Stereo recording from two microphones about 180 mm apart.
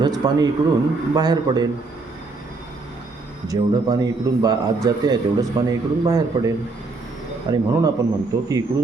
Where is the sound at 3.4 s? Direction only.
20° right (ahead or behind).